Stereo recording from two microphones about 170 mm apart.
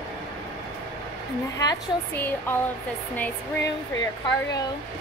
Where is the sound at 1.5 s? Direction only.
15° left (ahead or behind).